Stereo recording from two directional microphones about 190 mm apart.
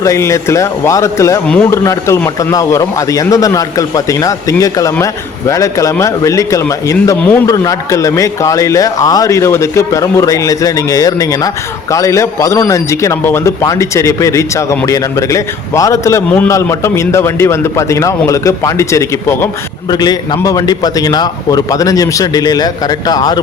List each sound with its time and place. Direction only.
0.0 s a man's voice: 15° left (ahead or behind)